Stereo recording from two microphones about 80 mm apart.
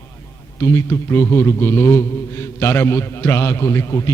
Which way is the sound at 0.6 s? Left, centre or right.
Left.